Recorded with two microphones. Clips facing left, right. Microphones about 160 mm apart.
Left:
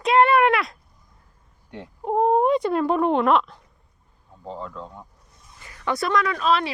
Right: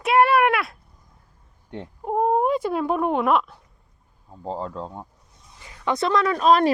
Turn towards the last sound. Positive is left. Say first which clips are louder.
# right 4 dB
turn(degrees=-40)  # may be behind; listen again after turning